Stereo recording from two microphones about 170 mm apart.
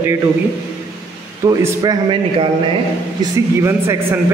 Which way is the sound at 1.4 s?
20° right (ahead or behind).